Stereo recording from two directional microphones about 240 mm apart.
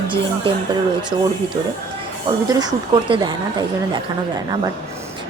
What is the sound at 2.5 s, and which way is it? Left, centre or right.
Speech, centre.